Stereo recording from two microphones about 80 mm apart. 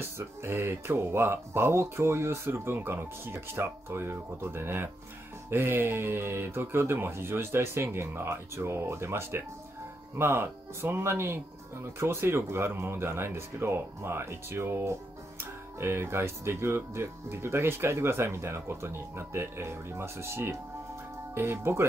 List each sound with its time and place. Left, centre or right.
0.2 s speech: right